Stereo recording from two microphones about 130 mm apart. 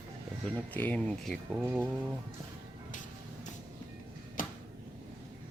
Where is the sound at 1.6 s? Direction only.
15° right (ahead or behind).